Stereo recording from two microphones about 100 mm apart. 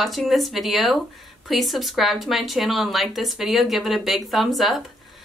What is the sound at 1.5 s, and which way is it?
Speech, centre (ahead or behind).